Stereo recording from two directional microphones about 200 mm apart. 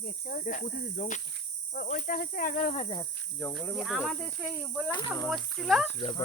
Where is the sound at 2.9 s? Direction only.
15° left (ahead or behind).